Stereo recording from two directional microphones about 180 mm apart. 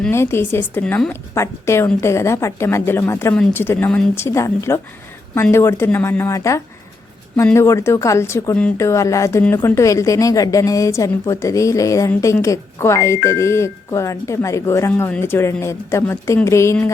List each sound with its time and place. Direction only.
0.1 s a woman's voice: 15° left (ahead or behind)